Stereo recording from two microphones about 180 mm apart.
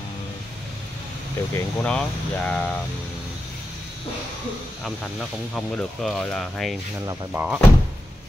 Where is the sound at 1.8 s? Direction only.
5° left (ahead or behind).